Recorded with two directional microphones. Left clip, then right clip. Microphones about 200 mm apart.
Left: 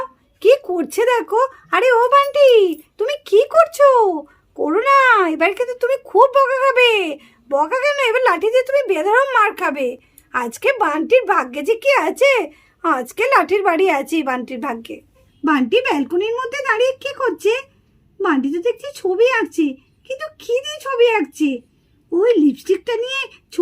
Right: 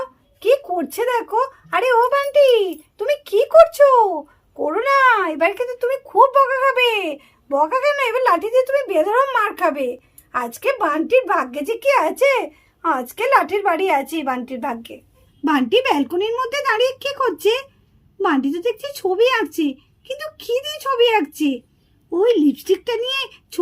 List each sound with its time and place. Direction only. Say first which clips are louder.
0.3 s speech: left 3 dB; 60° left (ahead or behind)
15.4 s speech: left 1 dB; 10° left (ahead or behind)